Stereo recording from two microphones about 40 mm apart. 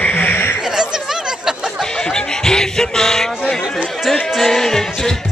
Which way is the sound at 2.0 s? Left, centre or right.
Centre.